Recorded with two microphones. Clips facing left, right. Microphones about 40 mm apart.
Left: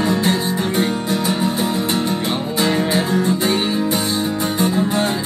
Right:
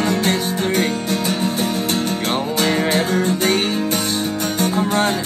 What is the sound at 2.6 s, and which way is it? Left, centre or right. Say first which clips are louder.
Music: left 1 dB; right.